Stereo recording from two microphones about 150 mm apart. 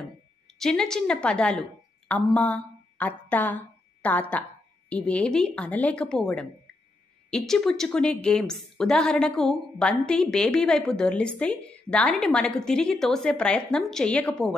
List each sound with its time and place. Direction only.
0.6 s a woman's voice: 5° left (ahead or behind)